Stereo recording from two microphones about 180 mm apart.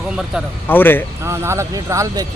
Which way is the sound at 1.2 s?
15° right (ahead or behind).